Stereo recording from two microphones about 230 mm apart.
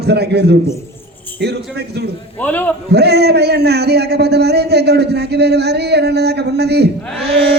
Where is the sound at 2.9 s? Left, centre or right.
Right.